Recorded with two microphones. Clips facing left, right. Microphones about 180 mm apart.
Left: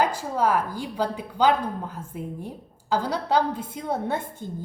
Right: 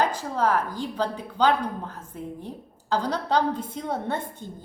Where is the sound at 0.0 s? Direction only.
10° left (ahead or behind).